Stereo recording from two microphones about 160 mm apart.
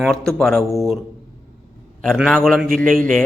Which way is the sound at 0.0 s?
5° left (ahead or behind).